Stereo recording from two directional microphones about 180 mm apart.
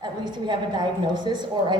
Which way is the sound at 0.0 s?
25° right (ahead or behind).